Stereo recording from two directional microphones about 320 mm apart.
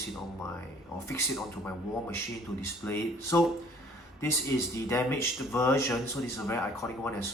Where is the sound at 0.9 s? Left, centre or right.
Centre.